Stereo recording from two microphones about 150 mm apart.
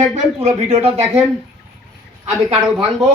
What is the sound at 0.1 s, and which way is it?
Speech, 45° right (ahead or behind).